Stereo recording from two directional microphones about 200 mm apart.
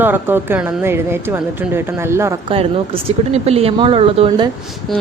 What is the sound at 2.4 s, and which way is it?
Speech, 30° right (ahead or behind).